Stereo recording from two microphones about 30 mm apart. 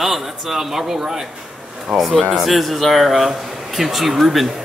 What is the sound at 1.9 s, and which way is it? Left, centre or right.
Speech, centre.